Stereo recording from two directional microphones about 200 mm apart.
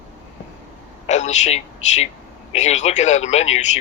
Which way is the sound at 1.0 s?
35° left (ahead or behind).